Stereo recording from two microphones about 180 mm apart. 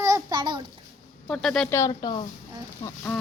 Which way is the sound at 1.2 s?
5° left (ahead or behind).